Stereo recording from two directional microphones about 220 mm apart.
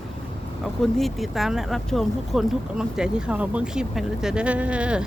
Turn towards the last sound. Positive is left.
turn(degrees=-5)  # may be behind; listen again after turning